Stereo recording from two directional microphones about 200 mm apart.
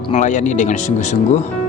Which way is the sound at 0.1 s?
40° left (ahead or behind).